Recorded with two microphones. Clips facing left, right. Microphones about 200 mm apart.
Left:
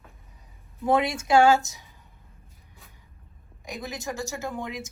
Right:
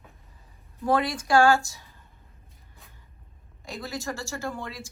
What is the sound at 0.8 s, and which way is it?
Speech, 20° left (ahead or behind).